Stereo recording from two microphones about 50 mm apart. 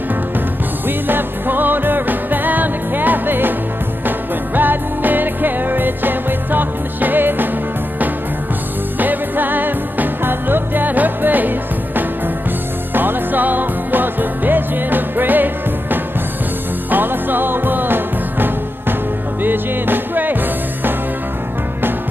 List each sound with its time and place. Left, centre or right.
0.8 s music: right
4.6 s music: right
9.0 s music: right